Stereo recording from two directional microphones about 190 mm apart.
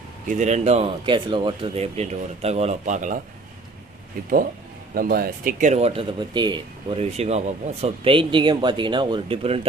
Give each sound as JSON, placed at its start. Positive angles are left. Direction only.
{"t": 0.3, "sound": "speech", "side_deg": -40}
{"t": 4.9, "sound": "speech", "side_deg": -50}
{"t": 7.0, "sound": "speech", "side_deg": -35}